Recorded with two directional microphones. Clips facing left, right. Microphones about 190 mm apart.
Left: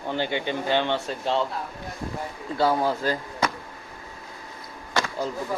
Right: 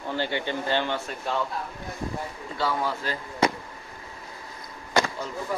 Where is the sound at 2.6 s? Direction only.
45° left (ahead or behind).